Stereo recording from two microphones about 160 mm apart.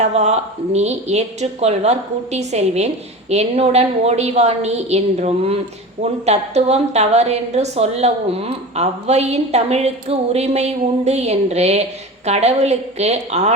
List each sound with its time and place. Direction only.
0.0 s a woman's voice: 45° right (ahead or behind)